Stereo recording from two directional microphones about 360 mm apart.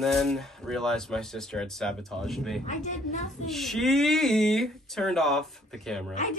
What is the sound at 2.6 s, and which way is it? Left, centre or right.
Speech, centre.